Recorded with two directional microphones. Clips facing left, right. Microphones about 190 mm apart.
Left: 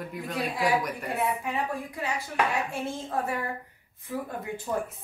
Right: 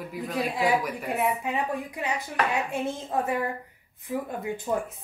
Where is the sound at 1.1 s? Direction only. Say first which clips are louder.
Right 2 dB; 20° right (ahead or behind).